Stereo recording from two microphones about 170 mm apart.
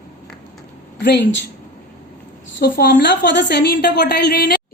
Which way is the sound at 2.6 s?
65° left (ahead or behind).